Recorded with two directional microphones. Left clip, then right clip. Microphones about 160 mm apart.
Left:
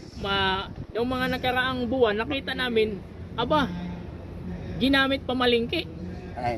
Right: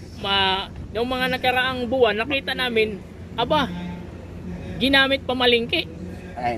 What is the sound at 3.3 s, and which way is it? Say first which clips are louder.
Speech: right 3 dB; 75° left (ahead or behind).